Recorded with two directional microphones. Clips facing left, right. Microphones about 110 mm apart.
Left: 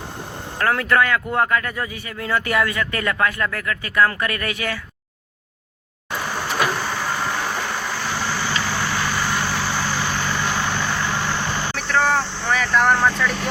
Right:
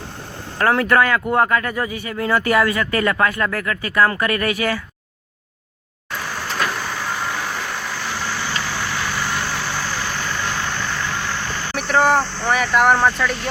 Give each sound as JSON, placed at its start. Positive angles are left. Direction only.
{"t": 0.6, "sound": "speech", "side_deg": -30}
{"t": 6.1, "sound": "vehicle", "side_deg": 5}
{"t": 11.9, "sound": "speech", "side_deg": -15}